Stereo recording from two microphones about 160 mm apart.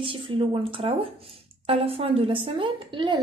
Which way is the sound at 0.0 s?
35° right (ahead or behind).